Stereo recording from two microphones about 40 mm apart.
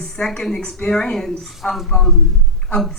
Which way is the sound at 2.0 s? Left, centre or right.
Centre.